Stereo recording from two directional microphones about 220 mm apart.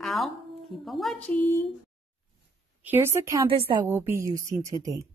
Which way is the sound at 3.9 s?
10° right (ahead or behind).